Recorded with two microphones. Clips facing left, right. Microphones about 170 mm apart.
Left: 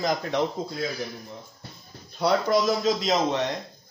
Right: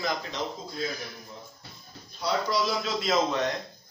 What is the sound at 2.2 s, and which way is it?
Speech, 55° left (ahead or behind).